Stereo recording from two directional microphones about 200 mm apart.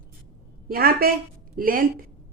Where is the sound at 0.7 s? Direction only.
45° right (ahead or behind).